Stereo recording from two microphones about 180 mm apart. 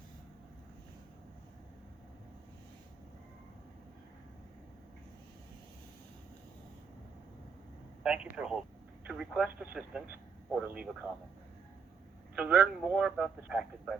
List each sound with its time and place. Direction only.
8.0 s speech: 5° right (ahead or behind)
12.4 s speech: 5° right (ahead or behind)